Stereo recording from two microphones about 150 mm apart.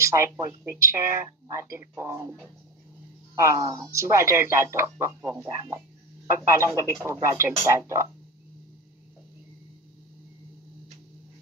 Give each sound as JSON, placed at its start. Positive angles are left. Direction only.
{"t": 0.0, "sound": "speech", "side_deg": -20}
{"t": 3.3, "sound": "speech", "side_deg": -20}